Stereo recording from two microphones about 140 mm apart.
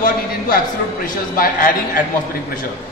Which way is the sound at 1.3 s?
85° left.